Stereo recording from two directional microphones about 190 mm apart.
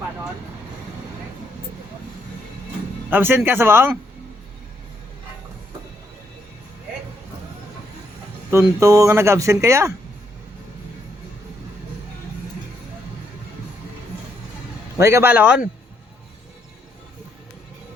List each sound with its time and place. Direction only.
3.1 s speech: 10° right (ahead or behind)
8.4 s speech: 15° right (ahead or behind)
14.9 s speech: 15° right (ahead or behind)